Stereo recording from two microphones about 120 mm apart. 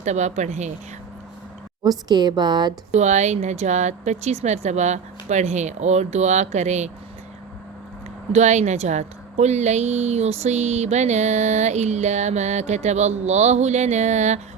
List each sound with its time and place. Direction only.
0.0 s speech: 75° right (ahead or behind)
1.8 s a woman's voice: 35° right (ahead or behind)
2.9 s speech: 75° right (ahead or behind)
8.3 s speech: 75° right (ahead or behind)